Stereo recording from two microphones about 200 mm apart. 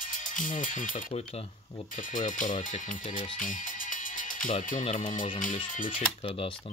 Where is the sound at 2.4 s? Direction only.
40° left (ahead or behind).